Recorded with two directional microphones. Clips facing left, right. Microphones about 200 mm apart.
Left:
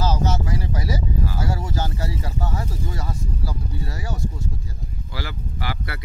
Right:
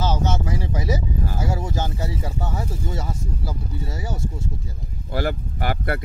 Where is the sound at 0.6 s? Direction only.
20° right (ahead or behind).